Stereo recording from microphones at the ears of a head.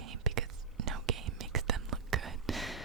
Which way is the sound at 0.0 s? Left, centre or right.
Right.